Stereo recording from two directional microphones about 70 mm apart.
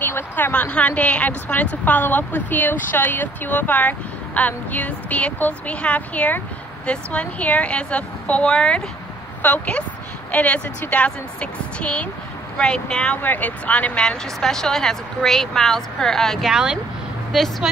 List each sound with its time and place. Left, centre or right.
0.0 s speech: left; by 16.4 s centre
16.4 s a woman's voice: centre